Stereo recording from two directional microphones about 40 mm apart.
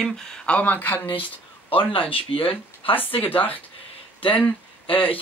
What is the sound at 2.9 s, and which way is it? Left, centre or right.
Speech, left.